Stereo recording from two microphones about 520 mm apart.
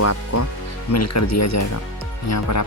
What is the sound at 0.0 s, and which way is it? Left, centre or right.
Speech, left.